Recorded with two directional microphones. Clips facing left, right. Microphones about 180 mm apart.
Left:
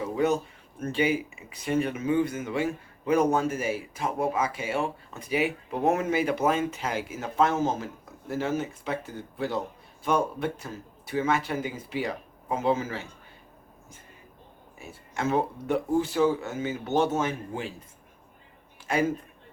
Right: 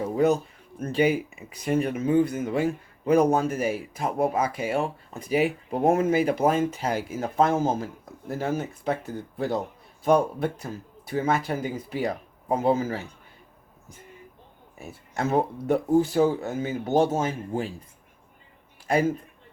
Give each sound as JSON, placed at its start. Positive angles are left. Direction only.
{"t": 0.0, "sound": "a sound", "side_deg": -40}
{"t": 0.8, "sound": "a man's voice", "side_deg": -40}
{"t": 14.8, "sound": "a man's voice", "side_deg": -40}
{"t": 18.9, "sound": "a man's voice", "side_deg": -35}